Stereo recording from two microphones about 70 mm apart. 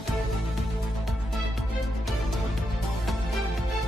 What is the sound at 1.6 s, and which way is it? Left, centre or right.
Music, centre.